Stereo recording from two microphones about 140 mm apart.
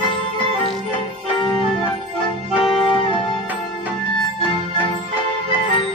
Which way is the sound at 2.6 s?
40° left (ahead or behind).